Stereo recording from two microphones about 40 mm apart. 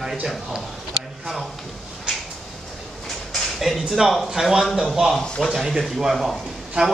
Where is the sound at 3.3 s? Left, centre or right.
Centre.